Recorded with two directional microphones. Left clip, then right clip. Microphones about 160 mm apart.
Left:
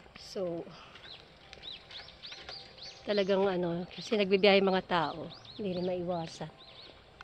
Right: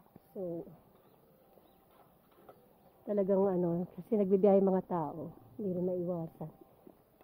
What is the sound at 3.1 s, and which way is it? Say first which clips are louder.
A woman's voice: left 2 dB; 25° right (ahead or behind).